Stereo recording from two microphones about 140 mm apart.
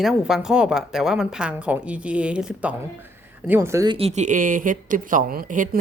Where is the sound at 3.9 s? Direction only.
45° right (ahead or behind); by 5.7 s 75° right (ahead or behind).